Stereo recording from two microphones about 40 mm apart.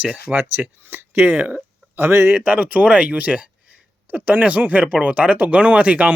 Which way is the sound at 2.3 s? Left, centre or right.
Right.